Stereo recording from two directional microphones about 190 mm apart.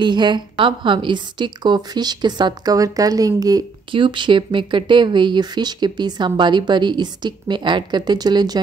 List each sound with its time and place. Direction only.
0.0 s a woman's voice: 25° right (ahead or behind)